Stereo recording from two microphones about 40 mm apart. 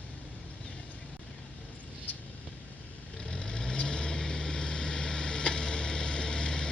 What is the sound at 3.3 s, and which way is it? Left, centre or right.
Vehicle, centre.